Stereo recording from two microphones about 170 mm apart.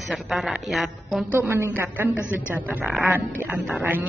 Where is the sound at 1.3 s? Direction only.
10° right (ahead or behind).